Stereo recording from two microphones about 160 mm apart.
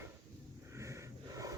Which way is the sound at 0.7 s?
20° right (ahead or behind).